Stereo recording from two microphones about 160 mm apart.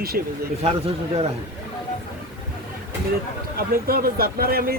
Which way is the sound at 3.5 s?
70° right (ahead or behind).